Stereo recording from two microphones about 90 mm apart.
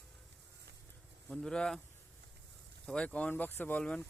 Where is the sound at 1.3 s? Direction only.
5° left (ahead or behind).